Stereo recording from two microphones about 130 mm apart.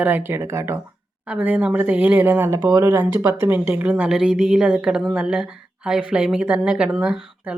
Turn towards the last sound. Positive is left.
turn(degrees=-5)  # may be behind; listen again after turning